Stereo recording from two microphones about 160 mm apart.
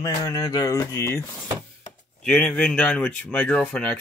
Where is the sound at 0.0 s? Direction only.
25° left (ahead or behind).